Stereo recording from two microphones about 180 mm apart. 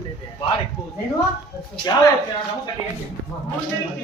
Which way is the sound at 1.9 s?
25° left (ahead or behind).